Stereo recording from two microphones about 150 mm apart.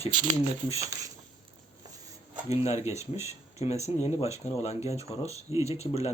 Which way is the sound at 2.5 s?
45° left (ahead or behind).